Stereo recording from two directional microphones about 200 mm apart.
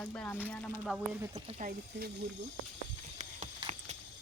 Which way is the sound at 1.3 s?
30° right (ahead or behind).